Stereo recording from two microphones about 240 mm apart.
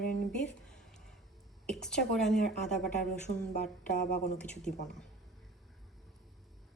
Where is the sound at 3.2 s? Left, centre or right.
Left.